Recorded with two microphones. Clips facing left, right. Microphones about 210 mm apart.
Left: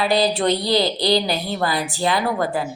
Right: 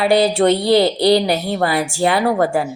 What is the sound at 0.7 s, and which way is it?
A woman's voice, 65° right (ahead or behind).